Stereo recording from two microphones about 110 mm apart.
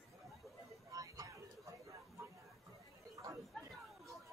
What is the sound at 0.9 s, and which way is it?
Vehicle, 35° right (ahead or behind).